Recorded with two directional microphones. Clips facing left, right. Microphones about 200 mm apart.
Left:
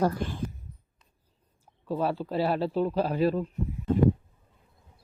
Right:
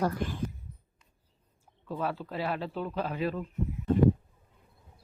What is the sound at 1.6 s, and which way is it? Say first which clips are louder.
Speech: left 5 dB; 30° left (ahead or behind).